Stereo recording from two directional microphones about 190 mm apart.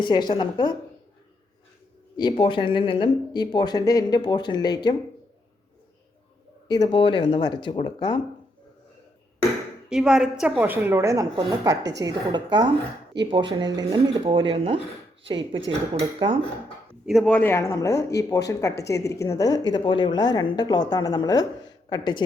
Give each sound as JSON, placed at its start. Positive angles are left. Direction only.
{"t": 0.0, "sound": "speech", "side_deg": 25}
{"t": 2.1, "sound": "speech", "side_deg": 25}
{"t": 6.7, "sound": "speech", "side_deg": 20}
{"t": 9.9, "sound": "a woman's voice", "side_deg": -5}
{"t": 13.2, "sound": "speech", "side_deg": -65}
{"t": 13.5, "sound": "speech", "side_deg": -20}
{"t": 16.0, "sound": "speech", "side_deg": -25}
{"t": 16.9, "sound": "speech", "side_deg": 0}